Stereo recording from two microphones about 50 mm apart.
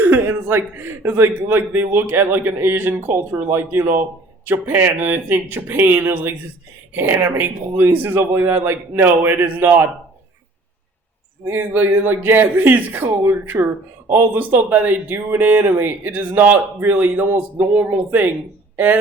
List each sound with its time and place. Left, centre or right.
0.0 s a man's voice: right
11.4 s a man's voice: right